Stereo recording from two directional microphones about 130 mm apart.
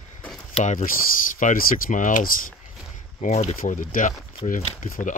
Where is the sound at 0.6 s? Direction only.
90° left.